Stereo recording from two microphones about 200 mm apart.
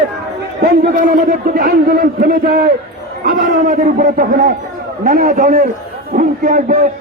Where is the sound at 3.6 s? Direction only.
40° right (ahead or behind).